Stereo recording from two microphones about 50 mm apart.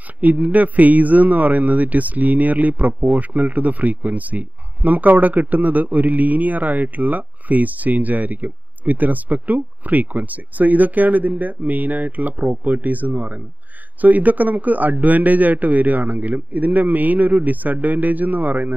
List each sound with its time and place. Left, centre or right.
0.2 s speech: right